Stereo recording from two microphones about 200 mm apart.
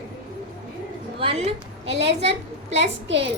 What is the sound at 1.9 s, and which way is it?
A woman's voice, 60° right (ahead or behind).